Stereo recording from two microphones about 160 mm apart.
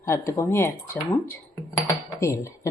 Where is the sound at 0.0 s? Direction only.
20° left (ahead or behind).